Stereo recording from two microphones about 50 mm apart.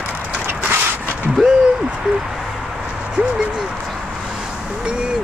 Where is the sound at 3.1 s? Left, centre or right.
Right.